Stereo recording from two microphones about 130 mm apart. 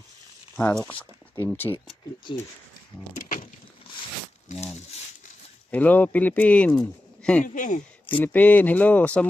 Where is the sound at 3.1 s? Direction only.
90° left.